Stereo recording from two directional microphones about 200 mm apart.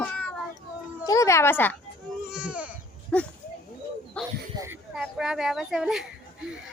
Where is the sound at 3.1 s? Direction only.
5° left (ahead or behind).